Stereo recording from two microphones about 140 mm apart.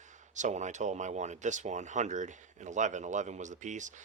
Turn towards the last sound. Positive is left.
turn(degrees=-60)  # may be behind; listen again after turning